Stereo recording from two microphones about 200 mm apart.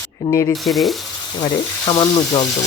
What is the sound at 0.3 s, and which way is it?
Speech, 15° left (ahead or behind).